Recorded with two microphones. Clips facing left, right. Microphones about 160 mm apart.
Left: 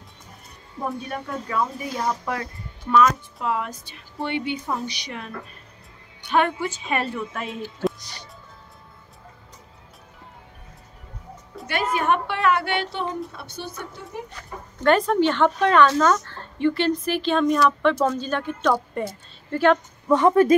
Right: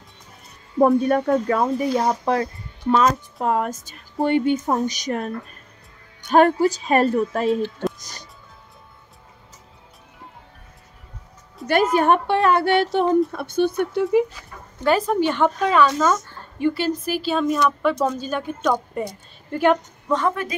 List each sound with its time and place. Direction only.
0.7 s speech: 55° right (ahead or behind); by 3.2 s 30° right (ahead or behind)
3.3 s speech: 45° right (ahead or behind)
8.0 s music: 45° right (ahead or behind)
11.6 s music: centre (ahead or behind)
11.9 s speech: 40° right (ahead or behind); by 14.2 s 65° right (ahead or behind)
14.3 s speech: 5° right (ahead or behind)
20.1 s speech: 15° left (ahead or behind)